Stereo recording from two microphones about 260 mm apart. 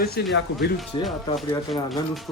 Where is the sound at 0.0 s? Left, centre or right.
Left.